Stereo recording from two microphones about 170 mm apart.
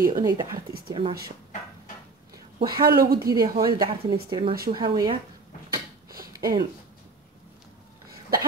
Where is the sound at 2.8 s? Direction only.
65° right (ahead or behind).